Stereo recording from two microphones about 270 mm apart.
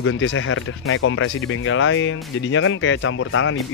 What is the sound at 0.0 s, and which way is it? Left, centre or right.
Speech, left.